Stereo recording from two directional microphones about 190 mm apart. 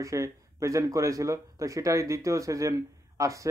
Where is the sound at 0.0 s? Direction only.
15° right (ahead or behind).